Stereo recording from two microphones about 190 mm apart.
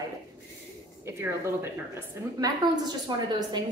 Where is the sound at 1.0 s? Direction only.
15° right (ahead or behind).